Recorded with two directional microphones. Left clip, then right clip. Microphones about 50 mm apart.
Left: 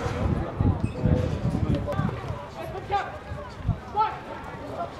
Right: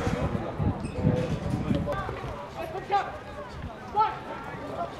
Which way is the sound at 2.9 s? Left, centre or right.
Centre.